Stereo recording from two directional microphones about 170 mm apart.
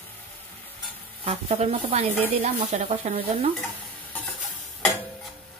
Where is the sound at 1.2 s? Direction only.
35° right (ahead or behind).